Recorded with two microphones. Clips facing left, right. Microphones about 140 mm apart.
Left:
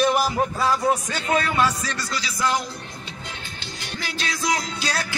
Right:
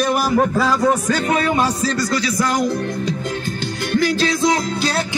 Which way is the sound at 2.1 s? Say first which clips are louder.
Right 6 dB; 50° right (ahead or behind).